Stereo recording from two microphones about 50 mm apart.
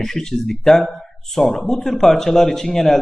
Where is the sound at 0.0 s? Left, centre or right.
Centre.